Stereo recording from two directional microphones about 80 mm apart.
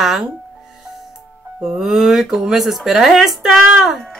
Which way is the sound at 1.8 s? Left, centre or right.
Centre.